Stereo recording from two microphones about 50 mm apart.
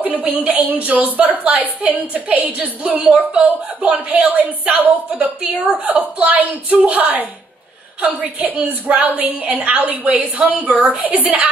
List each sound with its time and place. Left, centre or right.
0.0 s a woman's voice: right